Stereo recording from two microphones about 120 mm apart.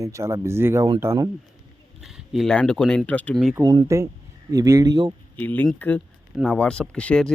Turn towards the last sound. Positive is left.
turn(degrees=10)  # may be behind; listen again after turning